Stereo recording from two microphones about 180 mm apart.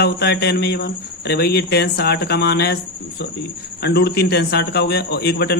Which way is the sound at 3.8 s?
65° left (ahead or behind).